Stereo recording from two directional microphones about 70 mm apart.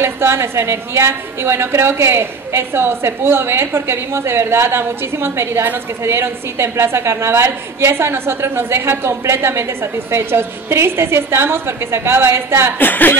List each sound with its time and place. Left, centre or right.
0.0 s a woman's voice: right
12.7 s speech: left